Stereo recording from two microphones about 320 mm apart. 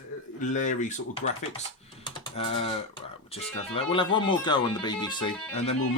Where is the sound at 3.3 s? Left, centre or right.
Centre.